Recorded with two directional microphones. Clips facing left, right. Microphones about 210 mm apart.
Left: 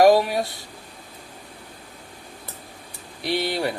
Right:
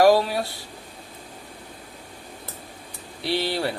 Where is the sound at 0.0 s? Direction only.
20° left (ahead or behind).